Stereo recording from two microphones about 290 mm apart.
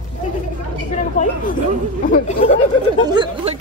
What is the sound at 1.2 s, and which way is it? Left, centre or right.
Speech, left.